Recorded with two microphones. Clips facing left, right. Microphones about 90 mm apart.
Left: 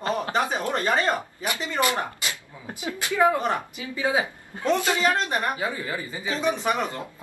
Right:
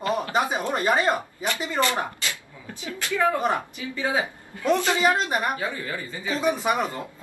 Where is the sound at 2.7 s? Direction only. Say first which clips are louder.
Even; 15° left (ahead or behind).